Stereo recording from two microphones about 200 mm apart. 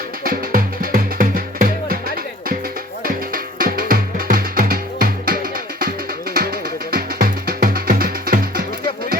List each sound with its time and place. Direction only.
0.3 s music: 45° right (ahead or behind)
3.0 s music: 45° right (ahead or behind)